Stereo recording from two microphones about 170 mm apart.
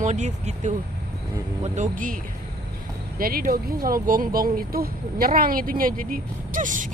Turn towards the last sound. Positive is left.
turn(degrees=-50)  # may be behind; listen again after turning